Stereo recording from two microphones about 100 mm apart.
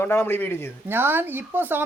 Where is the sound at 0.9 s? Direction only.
20° right (ahead or behind).